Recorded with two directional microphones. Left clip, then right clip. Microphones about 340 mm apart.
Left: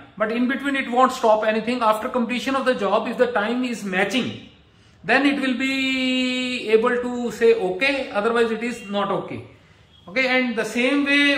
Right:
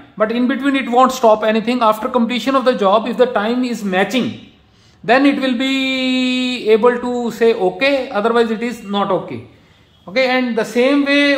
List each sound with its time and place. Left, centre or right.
0.2 s a man's voice: centre
10.1 s a man's voice: centre